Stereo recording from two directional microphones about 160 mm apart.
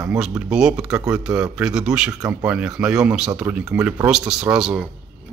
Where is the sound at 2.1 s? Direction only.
20° right (ahead or behind).